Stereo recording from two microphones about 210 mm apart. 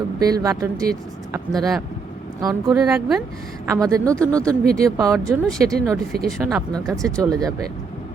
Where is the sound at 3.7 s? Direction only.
15° right (ahead or behind).